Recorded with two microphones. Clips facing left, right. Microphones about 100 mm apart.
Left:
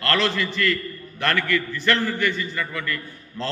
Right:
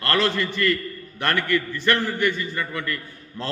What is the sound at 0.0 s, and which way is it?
A man's voice, 20° right (ahead or behind).